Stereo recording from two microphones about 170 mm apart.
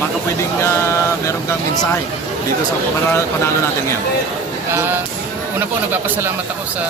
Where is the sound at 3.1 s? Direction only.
15° left (ahead or behind).